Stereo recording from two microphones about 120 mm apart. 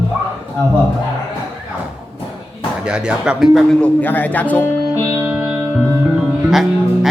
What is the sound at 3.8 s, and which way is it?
Speech, 15° left (ahead or behind).